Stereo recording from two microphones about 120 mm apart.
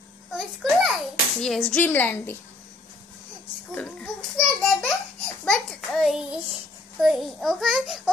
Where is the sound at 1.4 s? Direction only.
5° left (ahead or behind).